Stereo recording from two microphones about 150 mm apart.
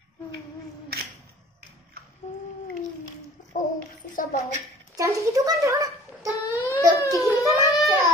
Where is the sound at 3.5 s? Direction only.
60° left (ahead or behind).